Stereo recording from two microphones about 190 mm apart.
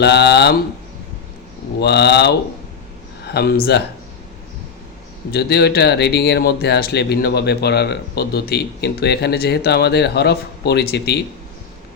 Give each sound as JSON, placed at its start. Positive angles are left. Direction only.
{"t": 0.0, "sound": "speech", "side_deg": 60}
{"t": 1.8, "sound": "speech", "side_deg": 60}
{"t": 5.3, "sound": "speech", "side_deg": 60}